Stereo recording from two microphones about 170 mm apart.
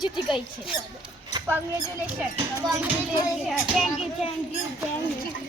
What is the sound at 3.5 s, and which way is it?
Speech, centre (ahead or behind).